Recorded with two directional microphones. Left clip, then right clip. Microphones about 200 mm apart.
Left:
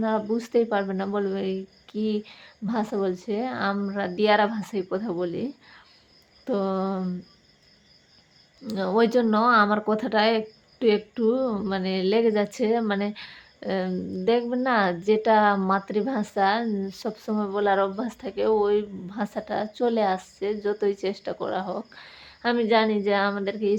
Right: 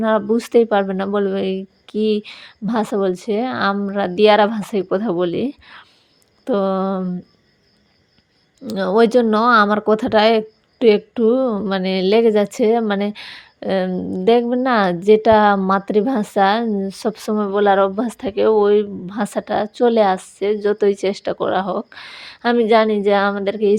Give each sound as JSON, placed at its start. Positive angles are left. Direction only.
{"t": 0.0, "sound": "speech", "side_deg": -40}
{"t": 8.6, "sound": "speech", "side_deg": -35}